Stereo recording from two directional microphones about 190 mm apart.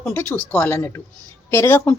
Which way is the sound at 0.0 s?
10° left (ahead or behind).